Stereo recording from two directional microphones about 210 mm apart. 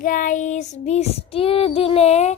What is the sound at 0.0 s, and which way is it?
Child singing, 40° left (ahead or behind).